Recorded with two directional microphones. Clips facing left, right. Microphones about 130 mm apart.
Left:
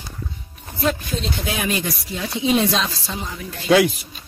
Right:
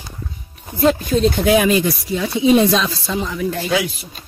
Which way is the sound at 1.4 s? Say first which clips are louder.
Right 13 dB; 90° right.